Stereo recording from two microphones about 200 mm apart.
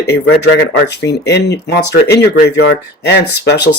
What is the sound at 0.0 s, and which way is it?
Speech, 60° left (ahead or behind).